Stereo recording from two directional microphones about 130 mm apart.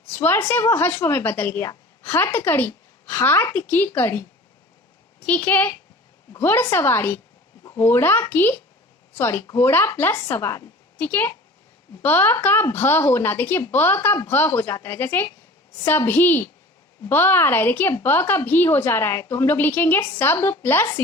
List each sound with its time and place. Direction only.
0.1 s a woman's voice: 15° left (ahead or behind)